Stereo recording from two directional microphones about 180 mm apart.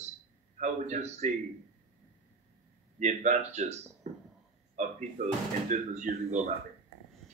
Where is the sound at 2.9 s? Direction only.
40° right (ahead or behind).